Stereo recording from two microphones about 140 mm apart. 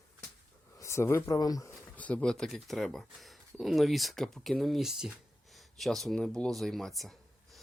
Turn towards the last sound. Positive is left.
turn(degrees=0)  # may be behind; listen again after turning